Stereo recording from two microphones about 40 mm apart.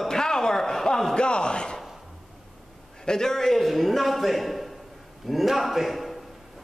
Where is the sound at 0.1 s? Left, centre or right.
Centre.